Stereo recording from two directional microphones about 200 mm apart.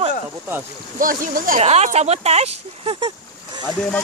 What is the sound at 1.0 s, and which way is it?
Speech, 45° right (ahead or behind).